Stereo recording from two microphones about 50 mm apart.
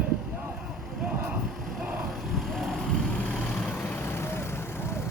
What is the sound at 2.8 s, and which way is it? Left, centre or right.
Vehicle, centre.